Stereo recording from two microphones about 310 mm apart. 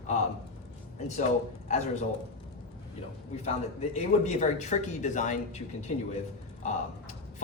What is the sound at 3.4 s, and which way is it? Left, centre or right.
Speech, left.